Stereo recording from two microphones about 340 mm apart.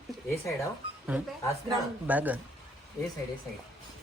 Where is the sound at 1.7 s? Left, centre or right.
Centre.